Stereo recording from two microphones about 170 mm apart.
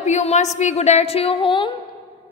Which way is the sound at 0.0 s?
40° left (ahead or behind).